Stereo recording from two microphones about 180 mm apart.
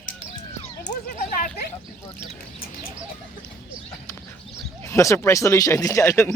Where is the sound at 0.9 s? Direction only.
45° left (ahead or behind).